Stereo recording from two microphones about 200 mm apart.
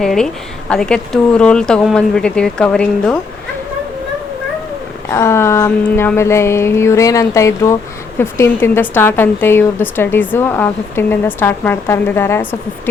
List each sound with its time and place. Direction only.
0.0 s speech: centre (ahead or behind)
5.1 s a woman's voice: 15° left (ahead or behind)